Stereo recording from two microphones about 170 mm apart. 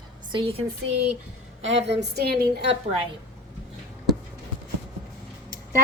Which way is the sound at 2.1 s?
70° right (ahead or behind).